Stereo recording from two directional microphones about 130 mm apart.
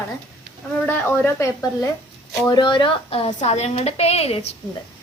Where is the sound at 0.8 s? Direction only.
15° left (ahead or behind).